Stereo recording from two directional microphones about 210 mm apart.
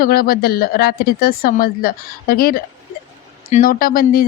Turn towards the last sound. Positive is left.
turn(degrees=45)  # may be behind; listen again after turning